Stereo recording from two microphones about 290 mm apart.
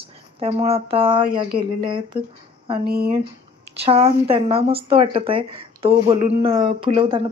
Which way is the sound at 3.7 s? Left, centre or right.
Right.